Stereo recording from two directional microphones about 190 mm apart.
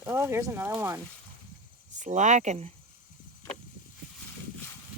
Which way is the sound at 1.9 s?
40° right (ahead or behind).